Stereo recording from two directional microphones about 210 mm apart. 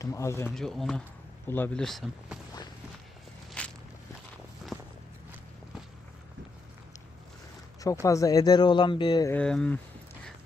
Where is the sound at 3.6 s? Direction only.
5° left (ahead or behind).